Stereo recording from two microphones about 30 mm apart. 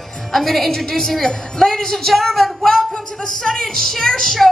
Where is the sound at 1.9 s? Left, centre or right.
Centre.